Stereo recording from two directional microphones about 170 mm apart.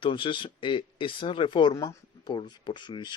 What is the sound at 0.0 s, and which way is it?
Speech, 30° left (ahead or behind).